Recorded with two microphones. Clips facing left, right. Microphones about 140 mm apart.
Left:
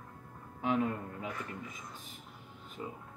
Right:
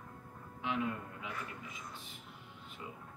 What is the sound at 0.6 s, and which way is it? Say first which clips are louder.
Speech: left 5 dB; 45° left (ahead or behind).